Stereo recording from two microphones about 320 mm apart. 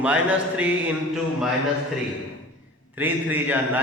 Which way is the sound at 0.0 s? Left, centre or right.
Centre.